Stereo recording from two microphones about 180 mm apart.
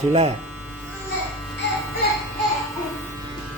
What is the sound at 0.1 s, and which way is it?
Speech, 35° right (ahead or behind).